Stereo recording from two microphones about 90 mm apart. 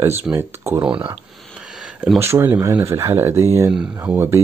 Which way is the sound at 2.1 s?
30° right (ahead or behind).